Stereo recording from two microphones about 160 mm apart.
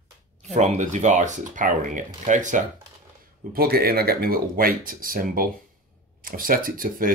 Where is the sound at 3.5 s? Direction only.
75° right (ahead or behind).